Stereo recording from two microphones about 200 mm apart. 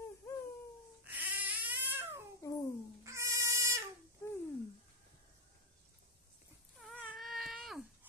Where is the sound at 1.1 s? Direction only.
10° right (ahead or behind).